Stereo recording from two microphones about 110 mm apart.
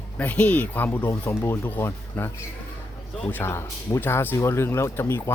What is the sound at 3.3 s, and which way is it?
Speech, 20° left (ahead or behind).